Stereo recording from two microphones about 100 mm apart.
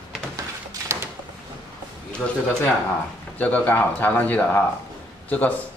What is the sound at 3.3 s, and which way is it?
Speech, 15° left (ahead or behind).